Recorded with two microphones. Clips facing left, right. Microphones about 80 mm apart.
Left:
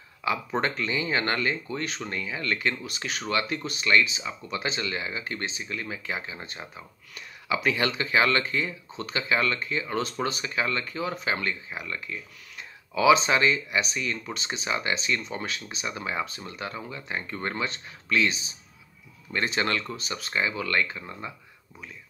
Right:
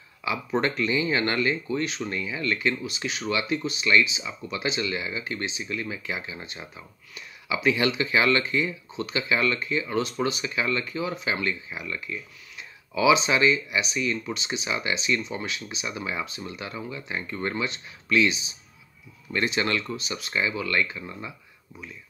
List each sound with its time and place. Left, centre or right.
0.2 s speech: left